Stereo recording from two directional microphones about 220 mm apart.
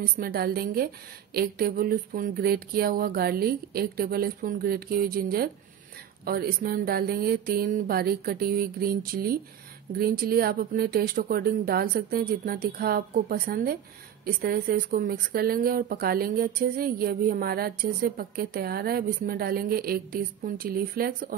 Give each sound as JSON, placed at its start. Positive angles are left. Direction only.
{"t": 0.0, "sound": "speech", "side_deg": -45}